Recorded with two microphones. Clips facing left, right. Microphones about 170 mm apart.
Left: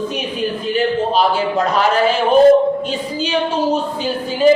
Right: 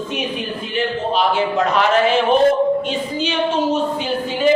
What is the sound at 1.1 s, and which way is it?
A woman's voice, 35° left (ahead or behind).